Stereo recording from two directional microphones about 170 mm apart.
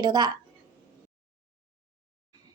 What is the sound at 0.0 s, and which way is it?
Speech, 25° right (ahead or behind).